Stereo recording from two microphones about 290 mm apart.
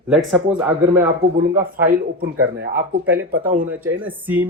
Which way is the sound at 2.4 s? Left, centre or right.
Right.